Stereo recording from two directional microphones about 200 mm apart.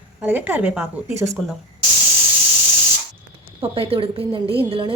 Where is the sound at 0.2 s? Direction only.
10° right (ahead or behind).